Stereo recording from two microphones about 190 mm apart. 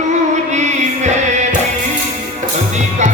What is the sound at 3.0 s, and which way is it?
Music, 40° right (ahead or behind).